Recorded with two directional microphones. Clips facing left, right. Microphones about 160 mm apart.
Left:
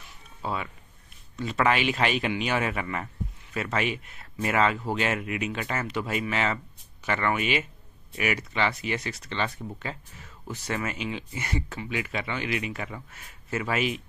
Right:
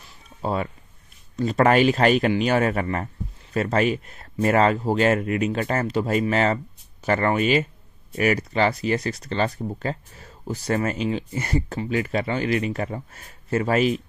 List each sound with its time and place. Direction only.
0.4 s speech: 40° right (ahead or behind)